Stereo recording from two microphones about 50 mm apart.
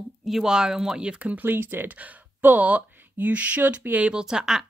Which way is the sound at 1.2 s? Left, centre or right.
Right.